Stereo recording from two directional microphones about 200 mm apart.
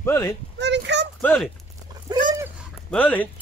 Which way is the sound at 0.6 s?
60° right (ahead or behind).